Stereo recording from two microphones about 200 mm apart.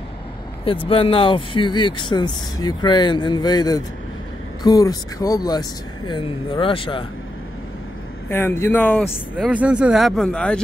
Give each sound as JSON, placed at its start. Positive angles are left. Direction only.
{"t": 0.7, "sound": "speech", "side_deg": 25}
{"t": 8.3, "sound": "speech", "side_deg": 10}
{"t": 9.4, "sound": "speech", "side_deg": -5}